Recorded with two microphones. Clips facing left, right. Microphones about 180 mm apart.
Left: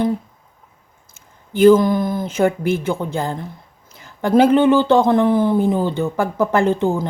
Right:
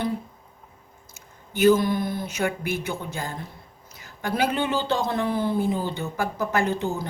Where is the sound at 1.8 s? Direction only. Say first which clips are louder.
Left 7 dB; 45° left (ahead or behind).